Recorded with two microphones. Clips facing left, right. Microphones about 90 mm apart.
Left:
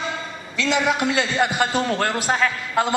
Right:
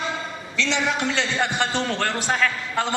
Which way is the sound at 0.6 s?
5° left (ahead or behind).